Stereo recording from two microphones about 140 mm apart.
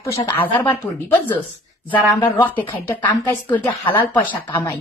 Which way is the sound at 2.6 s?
30° left (ahead or behind).